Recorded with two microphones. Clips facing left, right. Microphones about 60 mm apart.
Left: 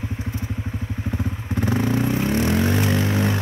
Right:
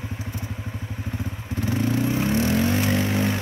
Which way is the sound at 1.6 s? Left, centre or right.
Left.